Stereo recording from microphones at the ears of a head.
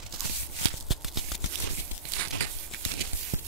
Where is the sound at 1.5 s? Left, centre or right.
Right.